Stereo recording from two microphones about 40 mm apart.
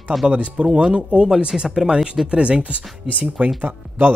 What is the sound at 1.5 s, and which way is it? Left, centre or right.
Speech, centre.